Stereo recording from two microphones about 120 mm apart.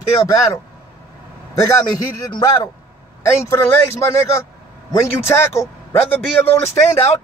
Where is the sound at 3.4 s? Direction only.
25° left (ahead or behind).